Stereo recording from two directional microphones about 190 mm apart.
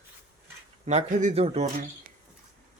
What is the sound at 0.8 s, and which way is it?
Speech, 40° right (ahead or behind).